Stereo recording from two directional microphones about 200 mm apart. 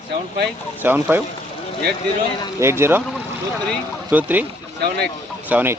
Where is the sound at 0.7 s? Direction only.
10° right (ahead or behind).